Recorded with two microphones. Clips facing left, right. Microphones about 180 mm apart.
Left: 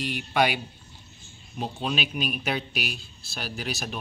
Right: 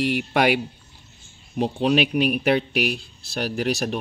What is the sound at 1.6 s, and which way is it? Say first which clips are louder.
Speech: right 10 dB; 70° right (ahead or behind).